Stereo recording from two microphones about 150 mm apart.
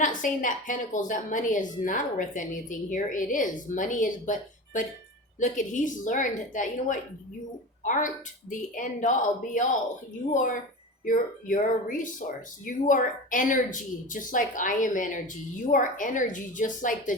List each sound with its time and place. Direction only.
0.0 s a woman's voice: 60° left (ahead or behind)